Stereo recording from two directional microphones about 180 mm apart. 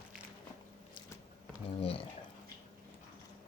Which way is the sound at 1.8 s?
30° left (ahead or behind).